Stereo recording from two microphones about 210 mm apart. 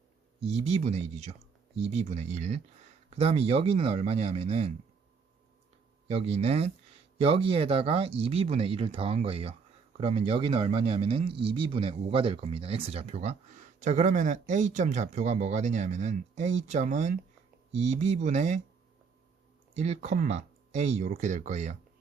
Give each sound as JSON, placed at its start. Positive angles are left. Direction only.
{"t": 0.3, "sound": "speech", "side_deg": -30}
{"t": 6.1, "sound": "speech", "side_deg": -30}
{"t": 19.7, "sound": "speech", "side_deg": -30}